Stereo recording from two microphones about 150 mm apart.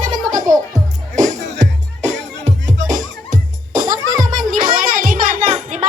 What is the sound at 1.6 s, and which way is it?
Music, 50° right (ahead or behind).